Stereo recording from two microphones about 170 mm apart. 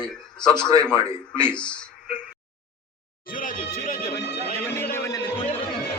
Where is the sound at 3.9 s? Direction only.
65° left (ahead or behind); by 4.5 s 80° left.